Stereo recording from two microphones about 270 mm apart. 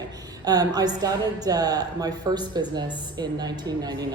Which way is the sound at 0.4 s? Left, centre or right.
Centre.